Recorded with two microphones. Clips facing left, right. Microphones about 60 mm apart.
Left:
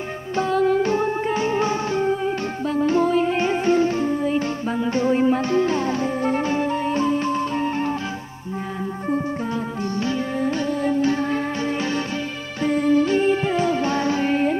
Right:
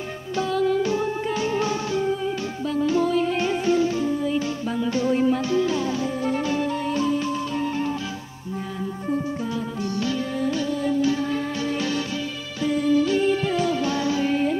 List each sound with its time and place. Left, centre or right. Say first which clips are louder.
0.4 s music: left 3 dB; left
10.0 s music: left 2 dB; left